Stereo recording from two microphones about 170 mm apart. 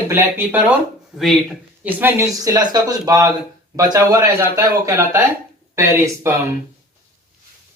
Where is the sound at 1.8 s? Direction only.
15° right (ahead or behind).